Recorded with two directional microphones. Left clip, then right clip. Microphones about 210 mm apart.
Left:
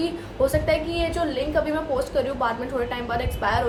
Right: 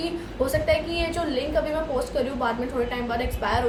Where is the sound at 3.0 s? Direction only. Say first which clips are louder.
Left 2 dB; 15° left (ahead or behind).